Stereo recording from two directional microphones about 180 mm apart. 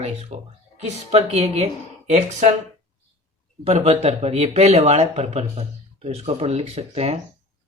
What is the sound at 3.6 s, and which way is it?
Speech, 35° right (ahead or behind).